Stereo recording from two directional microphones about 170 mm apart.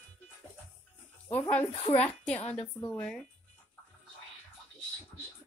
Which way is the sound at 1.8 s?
35° left (ahead or behind).